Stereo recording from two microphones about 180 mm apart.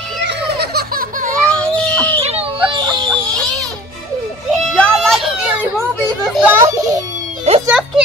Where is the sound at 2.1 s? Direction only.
35° right (ahead or behind).